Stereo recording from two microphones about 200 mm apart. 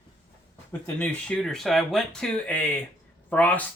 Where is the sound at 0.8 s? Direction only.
5° left (ahead or behind).